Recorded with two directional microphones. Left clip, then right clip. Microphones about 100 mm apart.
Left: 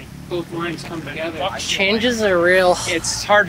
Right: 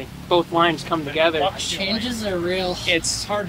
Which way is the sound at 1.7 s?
30° left (ahead or behind).